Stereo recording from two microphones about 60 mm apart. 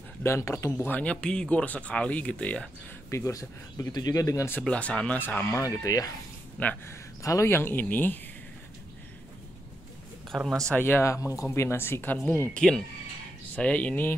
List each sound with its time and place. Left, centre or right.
0.2 s speech: left
0.9 s speech: centre
3.1 s speech: left
4.6 s speech: left
5.2 s speech: left
5.5 s speech: left
6.6 s speech: left
7.4 s speech: left
10.3 s a man's voice: centre
10.8 s speech: left
11.1 s speech: left
11.4 s speech: left
12.6 s a man's voice: centre
13.6 s speech: left